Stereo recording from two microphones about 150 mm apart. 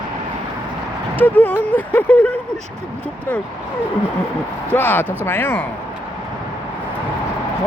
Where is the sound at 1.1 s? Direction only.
10° left (ahead or behind).